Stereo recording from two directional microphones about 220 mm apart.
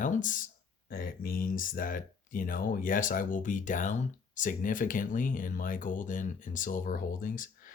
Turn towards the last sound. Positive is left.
turn(degrees=40)  # may be behind; listen again after turning